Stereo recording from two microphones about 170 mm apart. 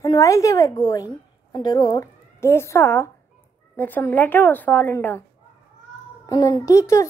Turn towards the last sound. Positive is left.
turn(degrees=20)  # may be behind; listen again after turning